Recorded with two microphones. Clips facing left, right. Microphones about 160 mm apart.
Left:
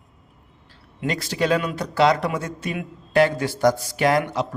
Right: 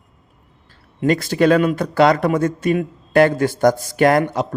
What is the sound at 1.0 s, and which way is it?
A man's voice, 50° right (ahead or behind).